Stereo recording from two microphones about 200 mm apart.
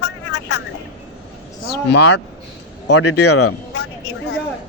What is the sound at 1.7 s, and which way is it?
Speech, 55° left (ahead or behind).